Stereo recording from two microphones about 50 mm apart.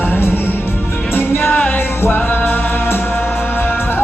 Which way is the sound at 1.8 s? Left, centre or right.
Left.